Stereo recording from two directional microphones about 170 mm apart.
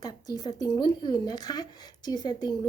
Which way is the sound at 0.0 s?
25° left (ahead or behind).